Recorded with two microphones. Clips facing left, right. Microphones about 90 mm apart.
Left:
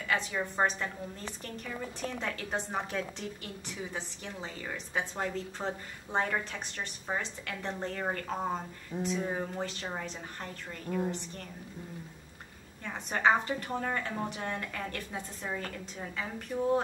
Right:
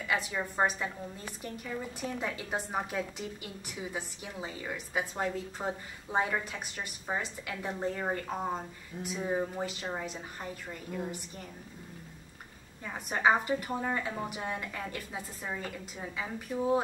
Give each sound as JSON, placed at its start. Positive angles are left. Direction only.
{"t": 0.1, "sound": "a woman's voice", "side_deg": -5}
{"t": 12.8, "sound": "a woman's voice", "side_deg": -10}